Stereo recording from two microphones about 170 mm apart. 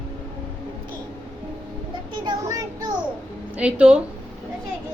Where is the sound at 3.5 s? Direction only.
5° right (ahead or behind).